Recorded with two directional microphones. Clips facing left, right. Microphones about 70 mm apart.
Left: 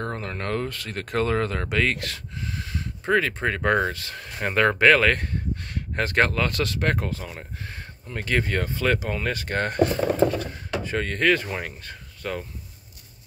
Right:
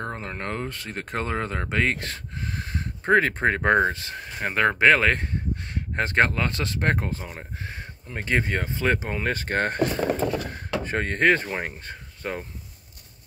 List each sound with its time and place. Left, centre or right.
0.0 s speech: centre
2.3 s speech: right
4.4 s speech: centre; by 9.8 s right
10.8 s speech: right